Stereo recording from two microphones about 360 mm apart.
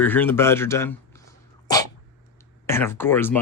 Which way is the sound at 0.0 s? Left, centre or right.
Centre.